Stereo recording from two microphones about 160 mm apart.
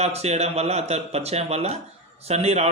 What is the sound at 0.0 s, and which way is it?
A man's voice, 40° right (ahead or behind).